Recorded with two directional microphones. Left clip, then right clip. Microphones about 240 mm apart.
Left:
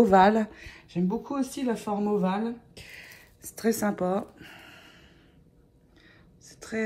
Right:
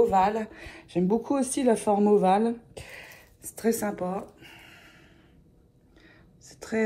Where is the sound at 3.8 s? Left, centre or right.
Centre.